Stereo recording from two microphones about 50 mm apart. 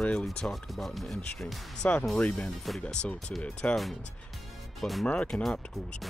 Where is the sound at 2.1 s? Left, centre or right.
Centre.